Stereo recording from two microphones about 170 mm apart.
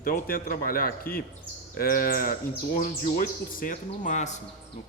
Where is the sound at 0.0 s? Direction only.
60° left (ahead or behind).